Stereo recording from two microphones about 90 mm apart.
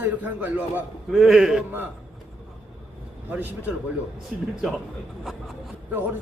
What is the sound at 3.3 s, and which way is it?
Speech, 20° right (ahead or behind).